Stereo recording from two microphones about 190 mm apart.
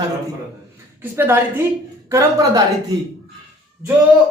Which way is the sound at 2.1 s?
15° right (ahead or behind).